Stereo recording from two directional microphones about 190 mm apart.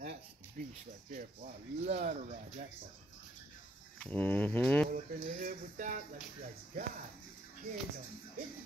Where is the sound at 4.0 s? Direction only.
10° left (ahead or behind).